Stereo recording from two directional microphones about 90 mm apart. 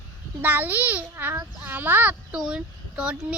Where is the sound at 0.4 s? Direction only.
20° right (ahead or behind).